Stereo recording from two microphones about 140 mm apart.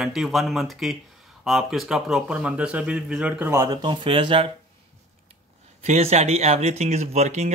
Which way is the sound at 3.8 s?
40° right (ahead or behind).